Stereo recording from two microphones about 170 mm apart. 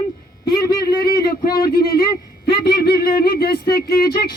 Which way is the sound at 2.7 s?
70° left (ahead or behind).